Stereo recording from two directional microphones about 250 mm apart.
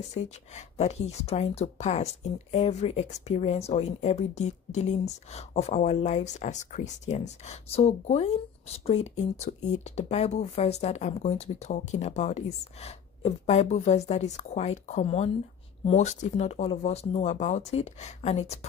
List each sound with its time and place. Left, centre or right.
0.1 s speech: left